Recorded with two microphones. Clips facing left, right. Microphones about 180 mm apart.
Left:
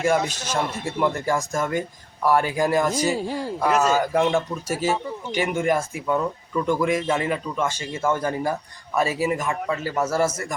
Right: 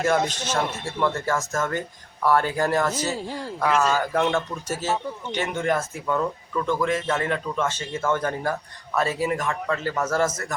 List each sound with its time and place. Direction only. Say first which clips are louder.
0.0 s speech: left 1 dB; 10° left (ahead or behind)
3.7 s speech: left 1 dB; 40° left (ahead or behind)
3.9 s speech: left 2 dB; 10° left (ahead or behind)